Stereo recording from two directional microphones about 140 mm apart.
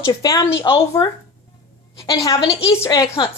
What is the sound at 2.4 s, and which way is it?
Speech, 45° left (ahead or behind).